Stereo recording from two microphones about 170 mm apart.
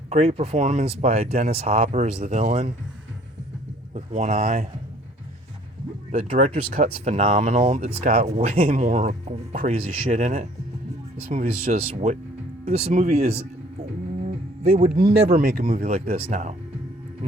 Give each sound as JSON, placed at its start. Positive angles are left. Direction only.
{"t": 0.1, "sound": "speech", "side_deg": -40}
{"t": 3.9, "sound": "speech", "side_deg": -40}
{"t": 6.1, "sound": "speech", "side_deg": -40}
{"t": 14.2, "sound": "guitar", "side_deg": -40}
{"t": 14.9, "sound": "speech", "side_deg": -65}
{"t": 15.4, "sound": "speech", "side_deg": -55}
{"t": 15.8, "sound": "speech", "side_deg": -35}